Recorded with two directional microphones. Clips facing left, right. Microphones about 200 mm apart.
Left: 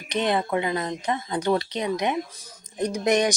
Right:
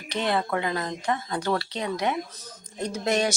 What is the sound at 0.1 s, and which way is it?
Speech, 20° left (ahead or behind).